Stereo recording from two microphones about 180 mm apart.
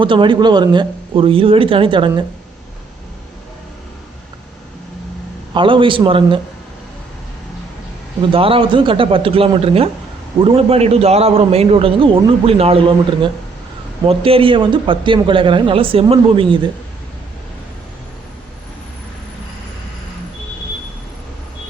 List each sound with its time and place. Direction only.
0.0 s a man's voice: 25° right (ahead or behind)
5.5 s a man's voice: 30° right (ahead or behind)
8.3 s a man's voice: 30° right (ahead or behind)